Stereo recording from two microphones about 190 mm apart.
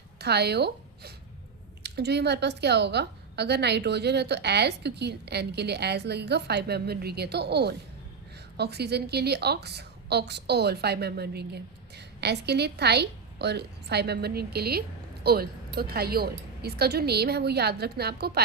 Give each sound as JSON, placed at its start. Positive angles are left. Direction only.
{"t": 0.2, "sound": "a woman's voice", "side_deg": -60}